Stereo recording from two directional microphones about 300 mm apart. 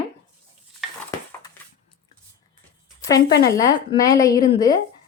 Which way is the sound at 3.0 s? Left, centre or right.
Centre.